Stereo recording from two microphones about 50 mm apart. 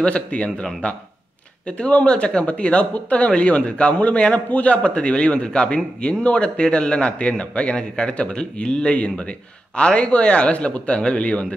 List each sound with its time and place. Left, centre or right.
0.0 s speech: left